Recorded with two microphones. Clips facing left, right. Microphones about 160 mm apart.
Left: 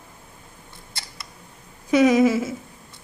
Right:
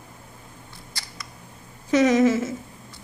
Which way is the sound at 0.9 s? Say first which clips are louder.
Left 1 dB; 25° left (ahead or behind).